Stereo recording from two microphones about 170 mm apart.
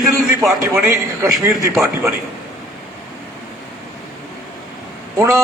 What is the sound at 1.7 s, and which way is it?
Speech, 5° right (ahead or behind).